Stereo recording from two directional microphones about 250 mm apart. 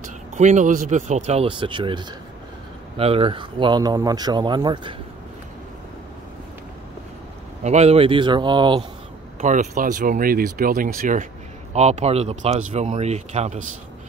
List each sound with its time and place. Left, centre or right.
0.0 s speech: right
7.6 s speech: right
9.4 s speech: right